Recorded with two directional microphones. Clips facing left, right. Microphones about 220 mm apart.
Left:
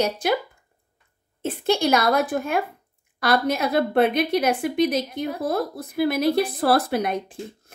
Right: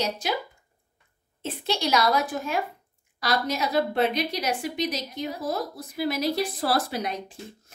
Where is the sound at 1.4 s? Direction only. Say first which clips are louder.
Left 7 dB; 50° left (ahead or behind).